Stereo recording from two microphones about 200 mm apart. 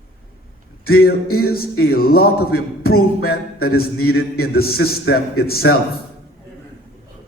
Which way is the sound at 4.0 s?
90° left.